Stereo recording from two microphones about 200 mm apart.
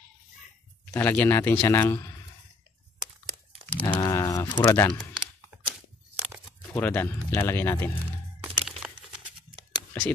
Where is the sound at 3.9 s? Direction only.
20° left (ahead or behind).